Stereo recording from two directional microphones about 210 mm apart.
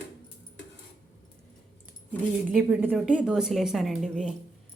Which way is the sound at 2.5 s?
5° right (ahead or behind).